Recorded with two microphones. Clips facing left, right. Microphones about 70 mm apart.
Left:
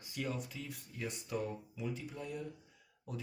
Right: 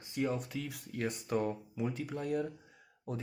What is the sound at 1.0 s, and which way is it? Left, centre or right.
Speech, right.